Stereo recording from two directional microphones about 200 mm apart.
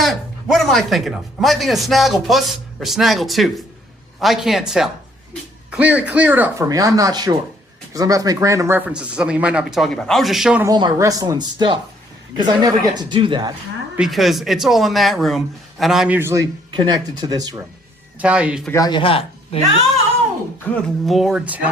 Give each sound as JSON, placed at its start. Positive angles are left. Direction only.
{"t": 0.0, "sound": "speech", "side_deg": 0}
{"t": 10.7, "sound": "speech", "side_deg": -20}
{"t": 13.9, "sound": "speech", "side_deg": 0}
{"t": 18.2, "sound": "speech", "side_deg": -5}
{"t": 18.7, "sound": "a man's voice", "side_deg": 20}
{"t": 20.7, "sound": "speech", "side_deg": 0}